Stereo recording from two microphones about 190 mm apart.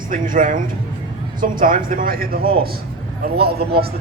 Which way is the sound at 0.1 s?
45° right (ahead or behind).